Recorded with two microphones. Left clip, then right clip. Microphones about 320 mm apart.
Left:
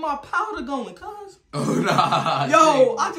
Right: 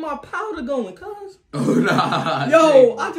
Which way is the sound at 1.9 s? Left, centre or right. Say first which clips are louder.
Left 4 dB; left.